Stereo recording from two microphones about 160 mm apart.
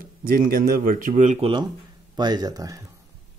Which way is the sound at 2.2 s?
25° right (ahead or behind).